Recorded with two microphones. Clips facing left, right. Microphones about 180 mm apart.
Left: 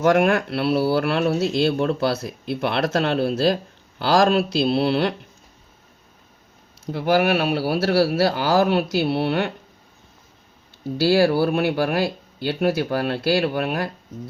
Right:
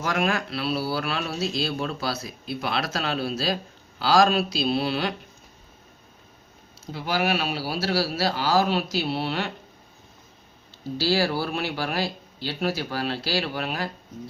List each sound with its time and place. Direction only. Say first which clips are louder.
0.0 s speech: left 8 dB; 60° left (ahead or behind)
6.8 s speech: left 7 dB; 55° left (ahead or behind)
11.0 s speech: left 7 dB; 55° left (ahead or behind)